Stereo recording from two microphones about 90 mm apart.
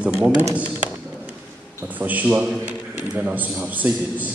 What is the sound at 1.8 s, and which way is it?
A man's voice, 20° right (ahead or behind).